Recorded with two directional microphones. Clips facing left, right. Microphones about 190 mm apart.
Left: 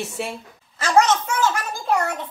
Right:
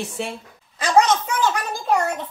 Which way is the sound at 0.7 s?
15° right (ahead or behind).